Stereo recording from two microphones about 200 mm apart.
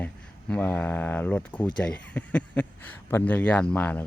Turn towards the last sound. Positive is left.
turn(degrees=5)  # may be behind; listen again after turning